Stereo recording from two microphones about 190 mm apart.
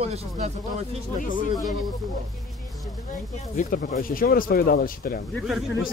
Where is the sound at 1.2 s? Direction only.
45° left (ahead or behind).